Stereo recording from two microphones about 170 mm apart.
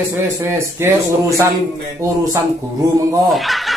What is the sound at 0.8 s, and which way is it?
Speech, 15° right (ahead or behind).